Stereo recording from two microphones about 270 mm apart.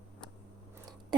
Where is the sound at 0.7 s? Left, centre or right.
Centre.